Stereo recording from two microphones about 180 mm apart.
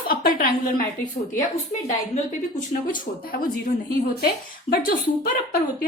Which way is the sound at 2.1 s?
45° left (ahead or behind).